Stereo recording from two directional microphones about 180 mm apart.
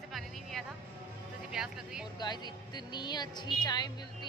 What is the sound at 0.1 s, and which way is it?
Music, centre (ahead or behind).